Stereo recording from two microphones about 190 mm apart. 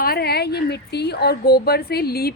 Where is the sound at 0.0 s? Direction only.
55° left (ahead or behind).